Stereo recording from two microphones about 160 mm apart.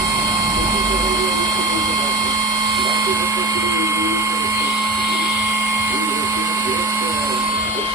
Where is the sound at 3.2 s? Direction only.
20° right (ahead or behind).